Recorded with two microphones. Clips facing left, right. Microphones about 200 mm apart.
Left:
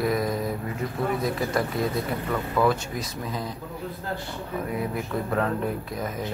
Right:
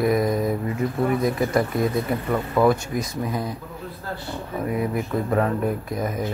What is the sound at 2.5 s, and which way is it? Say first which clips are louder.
Speech: right 4 dB; 15° right (ahead or behind).